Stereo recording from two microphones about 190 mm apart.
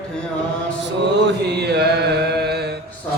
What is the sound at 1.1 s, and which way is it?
Mantra, 60° right (ahead or behind).